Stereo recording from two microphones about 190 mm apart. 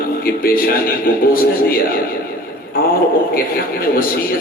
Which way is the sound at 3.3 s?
50° left (ahead or behind).